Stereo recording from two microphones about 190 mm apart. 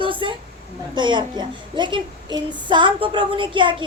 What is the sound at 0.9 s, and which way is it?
Speech, 25° right (ahead or behind).